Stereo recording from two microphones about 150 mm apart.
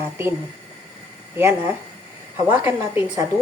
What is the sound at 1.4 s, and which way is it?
A woman's voice, 15° right (ahead or behind).